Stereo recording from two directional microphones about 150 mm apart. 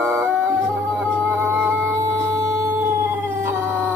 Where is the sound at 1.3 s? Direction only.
10° right (ahead or behind).